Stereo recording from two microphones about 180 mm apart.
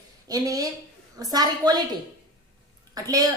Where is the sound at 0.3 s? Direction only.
20° right (ahead or behind).